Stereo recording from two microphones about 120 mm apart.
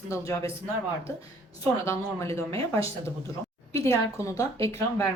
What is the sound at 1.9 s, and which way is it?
A woman's voice, 25° left (ahead or behind).